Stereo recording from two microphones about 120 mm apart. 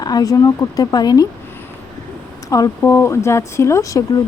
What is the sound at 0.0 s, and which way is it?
Speech, 30° left (ahead or behind).